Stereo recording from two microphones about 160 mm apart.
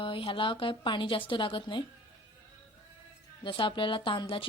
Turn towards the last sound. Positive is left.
turn(degrees=35)  # may be behind; listen again after turning